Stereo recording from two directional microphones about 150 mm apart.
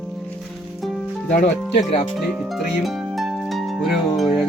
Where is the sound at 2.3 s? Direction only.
Centre (ahead or behind).